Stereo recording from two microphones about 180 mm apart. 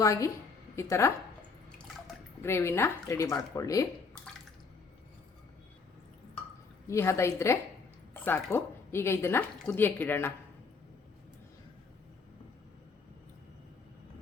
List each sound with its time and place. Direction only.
0.0 s a woman's voice: 15° left (ahead or behind)
2.4 s a woman's voice: 15° left (ahead or behind)
6.8 s a woman's voice: 15° left (ahead or behind)